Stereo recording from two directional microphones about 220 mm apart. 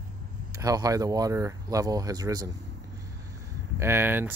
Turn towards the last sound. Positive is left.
turn(degrees=-10)  # may be behind; listen again after turning